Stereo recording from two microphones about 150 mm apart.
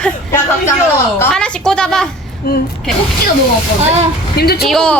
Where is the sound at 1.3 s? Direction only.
5° left (ahead or behind).